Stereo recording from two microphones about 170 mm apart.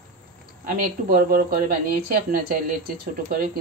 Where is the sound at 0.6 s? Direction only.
60° right (ahead or behind).